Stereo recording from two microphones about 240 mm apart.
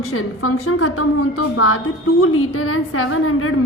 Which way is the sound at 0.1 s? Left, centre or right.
Left.